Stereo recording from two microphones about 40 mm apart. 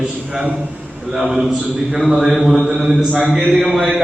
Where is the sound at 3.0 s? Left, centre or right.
Right.